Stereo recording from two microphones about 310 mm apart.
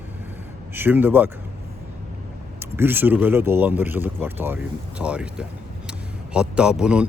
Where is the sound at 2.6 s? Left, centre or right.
Centre.